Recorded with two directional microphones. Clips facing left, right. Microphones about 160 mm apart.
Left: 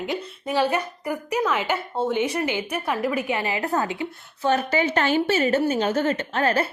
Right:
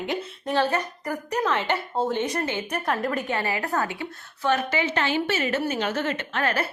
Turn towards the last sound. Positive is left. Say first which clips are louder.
# left 4 dB
turn(degrees=30)  # may be behind; listen again after turning